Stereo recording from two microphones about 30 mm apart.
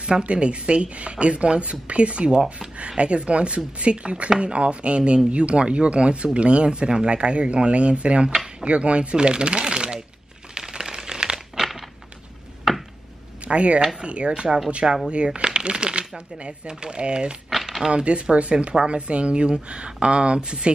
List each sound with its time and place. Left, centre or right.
0.2 s speech: right
9.1 s speech: right
10.5 s a sound: right
13.5 s speech: right
17.6 s a sound: centre
17.9 s speech: right